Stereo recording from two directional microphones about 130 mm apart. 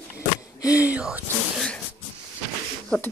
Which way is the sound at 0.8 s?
10° right (ahead or behind).